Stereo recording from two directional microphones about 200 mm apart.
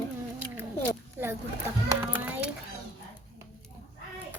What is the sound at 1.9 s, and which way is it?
Children playing, 10° right (ahead or behind).